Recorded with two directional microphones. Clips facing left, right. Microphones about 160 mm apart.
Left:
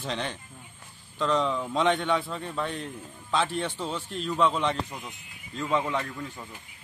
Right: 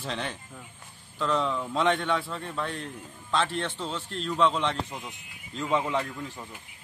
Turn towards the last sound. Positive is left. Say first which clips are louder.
# right 1 dB
turn(degrees=-5)  # may be behind; listen again after turning